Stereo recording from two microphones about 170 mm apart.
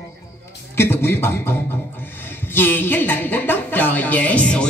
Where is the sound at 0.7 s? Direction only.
15° left (ahead or behind).